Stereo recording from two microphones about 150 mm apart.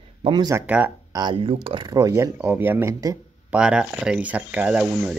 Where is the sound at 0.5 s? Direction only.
10° right (ahead or behind).